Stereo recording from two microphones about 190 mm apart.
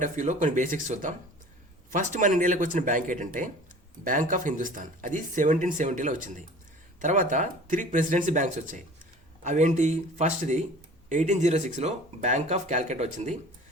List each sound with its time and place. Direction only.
0.0 s speech: 40° right (ahead or behind)